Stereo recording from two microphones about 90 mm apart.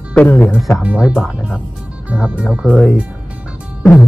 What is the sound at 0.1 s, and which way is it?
Speech, 15° left (ahead or behind).